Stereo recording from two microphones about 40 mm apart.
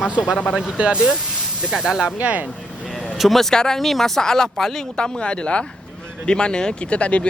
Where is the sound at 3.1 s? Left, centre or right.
Centre.